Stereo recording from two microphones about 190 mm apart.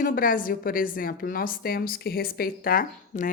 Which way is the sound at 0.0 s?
45° left (ahead or behind).